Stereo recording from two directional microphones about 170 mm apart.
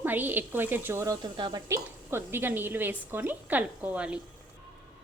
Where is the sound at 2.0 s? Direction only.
15° right (ahead or behind).